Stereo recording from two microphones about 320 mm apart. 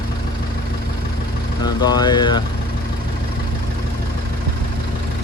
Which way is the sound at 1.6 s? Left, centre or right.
Centre.